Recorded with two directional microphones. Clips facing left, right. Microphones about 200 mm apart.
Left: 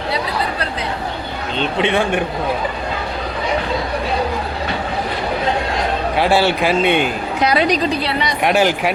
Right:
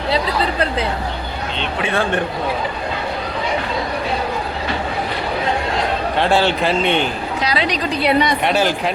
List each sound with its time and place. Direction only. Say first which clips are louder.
1.8 s a man's voice: left 2 dB; 15° left (ahead or behind)
6.1 s a man's voice: left 1 dB; 10° left (ahead or behind)
7.4 s a woman's voice: left 6 dB; 50° left (ahead or behind)
8.4 s a man's voice: left 2 dB; 10° left (ahead or behind)